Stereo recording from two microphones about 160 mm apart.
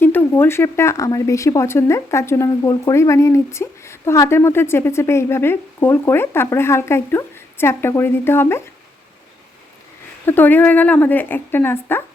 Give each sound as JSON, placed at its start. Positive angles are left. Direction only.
{"t": 0.0, "sound": "speech", "side_deg": 15}
{"t": 10.2, "sound": "speech", "side_deg": 10}